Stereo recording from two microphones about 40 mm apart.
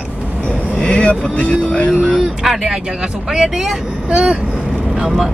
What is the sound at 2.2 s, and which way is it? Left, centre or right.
Speech, centre.